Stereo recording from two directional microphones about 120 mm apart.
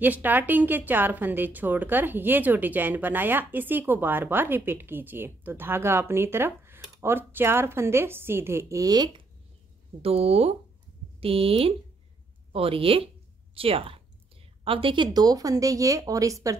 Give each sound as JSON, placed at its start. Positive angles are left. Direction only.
{"t": 0.0, "sound": "speech", "side_deg": -15}
{"t": 10.0, "sound": "a woman's voice", "side_deg": -55}